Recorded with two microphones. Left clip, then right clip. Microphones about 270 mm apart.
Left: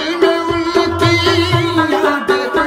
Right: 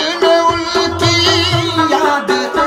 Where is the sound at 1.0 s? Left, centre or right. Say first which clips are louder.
Right 3 dB; right.